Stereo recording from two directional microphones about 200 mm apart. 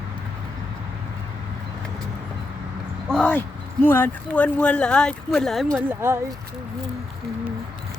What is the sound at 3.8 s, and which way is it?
Speech, 10° left (ahead or behind).